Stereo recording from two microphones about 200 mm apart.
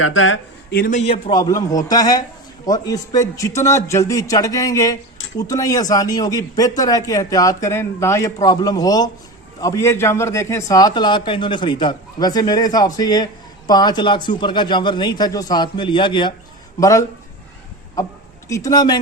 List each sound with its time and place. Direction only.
0.0 s speech: 85° left
0.7 s a man's voice: 45° left (ahead or behind); by 17.1 s 15° left (ahead or behind)
18.4 s a man's voice: 15° left (ahead or behind)